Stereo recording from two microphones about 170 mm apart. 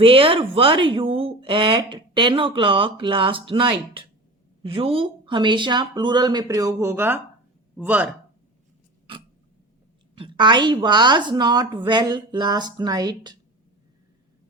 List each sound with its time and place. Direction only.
0.0 s a woman's voice: 30° right (ahead or behind); by 8.1 s 10° right (ahead or behind)
10.2 s a woman's voice: 30° right (ahead or behind)